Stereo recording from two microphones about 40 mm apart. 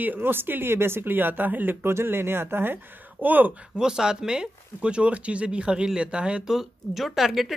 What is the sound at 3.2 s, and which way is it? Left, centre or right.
Speech, right.